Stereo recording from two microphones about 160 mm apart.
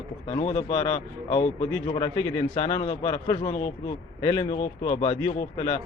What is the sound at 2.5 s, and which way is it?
A man's voice, 40° left (ahead or behind).